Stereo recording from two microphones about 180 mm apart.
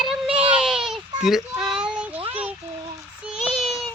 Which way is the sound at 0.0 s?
Centre (ahead or behind).